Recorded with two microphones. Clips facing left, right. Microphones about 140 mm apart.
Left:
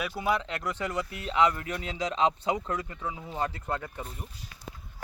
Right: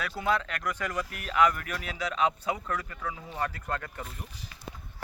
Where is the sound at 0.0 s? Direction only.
20° left (ahead or behind).